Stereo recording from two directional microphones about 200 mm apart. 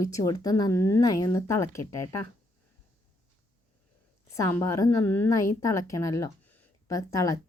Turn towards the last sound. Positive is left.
turn(degrees=15)  # may be behind; listen again after turning